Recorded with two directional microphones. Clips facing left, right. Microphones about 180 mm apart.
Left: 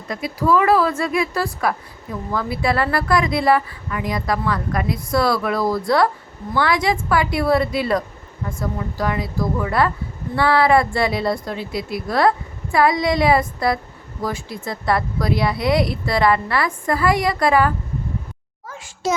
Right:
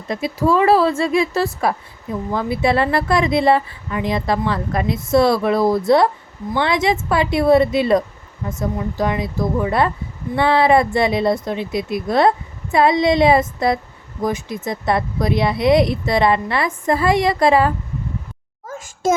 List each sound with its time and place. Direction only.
0.1 s speech: 25° right (ahead or behind)
18.7 s a child's voice: 45° right (ahead or behind)